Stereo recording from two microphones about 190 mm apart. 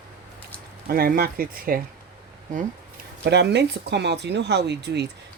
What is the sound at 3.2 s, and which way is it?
Speech, 60° right (ahead or behind).